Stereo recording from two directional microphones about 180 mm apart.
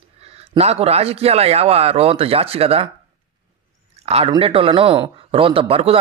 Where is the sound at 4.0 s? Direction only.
35° right (ahead or behind).